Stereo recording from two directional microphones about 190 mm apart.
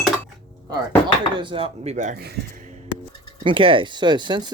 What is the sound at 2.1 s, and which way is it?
Speech, 55° right (ahead or behind).